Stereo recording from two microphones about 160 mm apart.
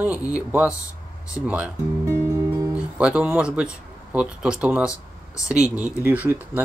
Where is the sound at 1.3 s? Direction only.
10° right (ahead or behind).